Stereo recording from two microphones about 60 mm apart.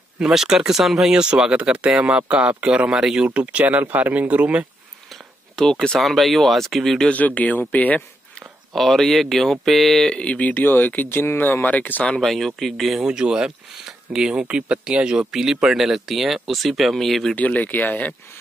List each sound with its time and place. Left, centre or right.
0.2 s speech: centre
3.6 s speech: right
5.1 s speech: centre
7.1 s speech: left
8.4 s speech: centre
10.1 s speech: left
12.2 s speech: centre
13.0 s speech: centre
17.4 s speech: left